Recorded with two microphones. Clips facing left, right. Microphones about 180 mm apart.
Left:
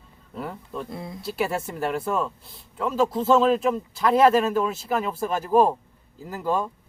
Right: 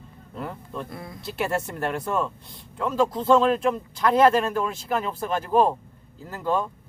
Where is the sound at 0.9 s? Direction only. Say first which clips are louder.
Left 3 dB; 20° left (ahead or behind).